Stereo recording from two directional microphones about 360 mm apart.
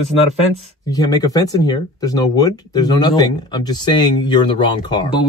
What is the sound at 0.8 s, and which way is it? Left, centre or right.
Speech, centre.